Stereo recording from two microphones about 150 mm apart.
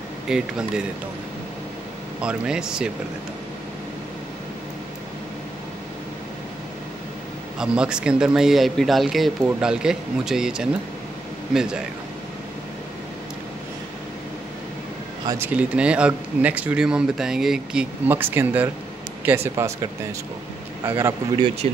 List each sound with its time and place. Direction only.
0.3 s speech: 5° right (ahead or behind)
2.2 s speech: 5° right (ahead or behind)
7.5 s speech: 5° right (ahead or behind)
15.3 s speech: 10° right (ahead or behind)